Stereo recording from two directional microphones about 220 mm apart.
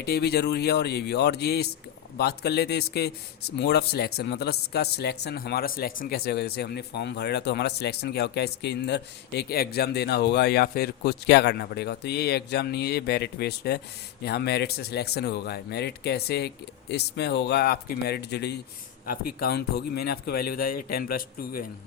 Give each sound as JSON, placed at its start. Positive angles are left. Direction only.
{"t": 0.0, "sound": "a man's voice", "side_deg": 45}